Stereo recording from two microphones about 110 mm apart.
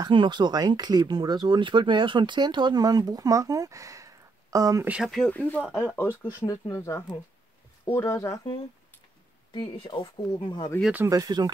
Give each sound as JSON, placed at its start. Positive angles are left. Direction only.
{"t": 0.0, "sound": "speech", "side_deg": -45}
{"t": 5.0, "sound": "speech", "side_deg": 5}
{"t": 6.4, "sound": "speech", "side_deg": 30}
{"t": 9.5, "sound": "speech", "side_deg": 50}
{"t": 11.1, "sound": "speech", "side_deg": -35}